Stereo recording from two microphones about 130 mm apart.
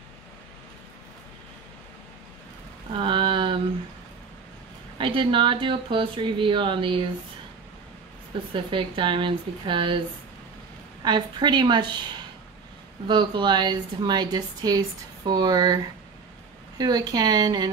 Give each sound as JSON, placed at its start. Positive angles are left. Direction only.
{"t": 3.0, "sound": "a sound", "side_deg": -40}
{"t": 4.9, "sound": "speech", "side_deg": -40}
{"t": 8.5, "sound": "speech", "side_deg": -40}
{"t": 11.0, "sound": "speech", "side_deg": -35}
{"t": 13.0, "sound": "speech", "side_deg": -35}